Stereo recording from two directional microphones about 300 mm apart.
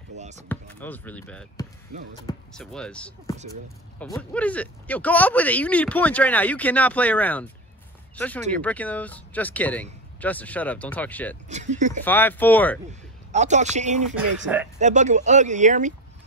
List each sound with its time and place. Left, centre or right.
0.2 s basketball bounce: right
0.5 s speech: centre
11.4 s speech: right
12.0 s speech: centre
13.3 s speech: right
14.1 s speech: centre
14.8 s speech: right